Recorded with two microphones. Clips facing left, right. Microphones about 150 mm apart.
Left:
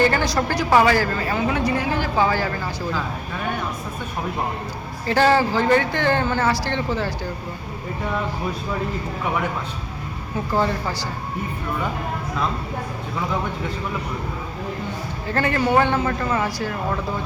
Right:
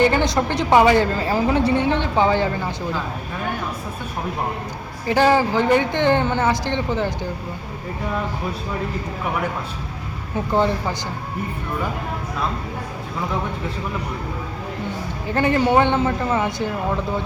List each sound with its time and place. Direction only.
0.0 s speech: 20° right (ahead or behind)
5.0 s speech: 15° right (ahead or behind)
10.5 s speech: 20° right (ahead or behind)
15.3 s speech: 20° right (ahead or behind)